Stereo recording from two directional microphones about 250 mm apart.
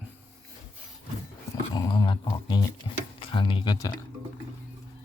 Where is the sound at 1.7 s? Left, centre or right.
Centre.